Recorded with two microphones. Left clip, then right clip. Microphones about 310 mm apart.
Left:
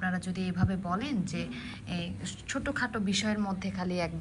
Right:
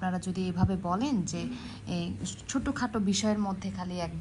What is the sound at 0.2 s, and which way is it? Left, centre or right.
Speech, centre.